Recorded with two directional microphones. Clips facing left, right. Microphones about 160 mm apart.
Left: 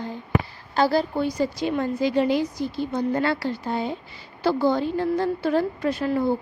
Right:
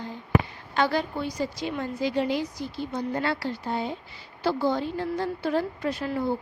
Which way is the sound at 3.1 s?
75° left (ahead or behind).